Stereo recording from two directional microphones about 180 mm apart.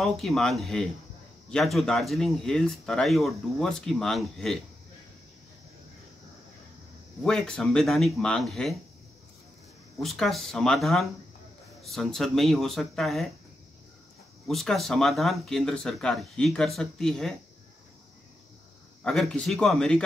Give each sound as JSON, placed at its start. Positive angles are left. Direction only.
{"t": 0.0, "sound": "speech", "side_deg": 0}
{"t": 7.2, "sound": "speech", "side_deg": 5}
{"t": 10.0, "sound": "speech", "side_deg": 0}
{"t": 14.5, "sound": "speech", "side_deg": 0}
{"t": 19.0, "sound": "speech", "side_deg": 5}